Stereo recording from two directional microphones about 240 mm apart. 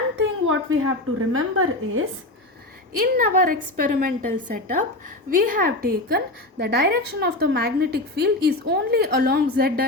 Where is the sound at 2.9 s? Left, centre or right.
Right.